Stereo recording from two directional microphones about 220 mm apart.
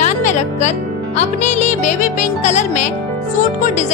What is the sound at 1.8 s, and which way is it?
Speech, 30° left (ahead or behind).